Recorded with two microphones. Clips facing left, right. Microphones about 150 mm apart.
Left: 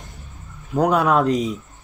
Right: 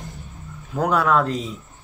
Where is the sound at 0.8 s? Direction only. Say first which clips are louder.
Left 2 dB; 20° left (ahead or behind).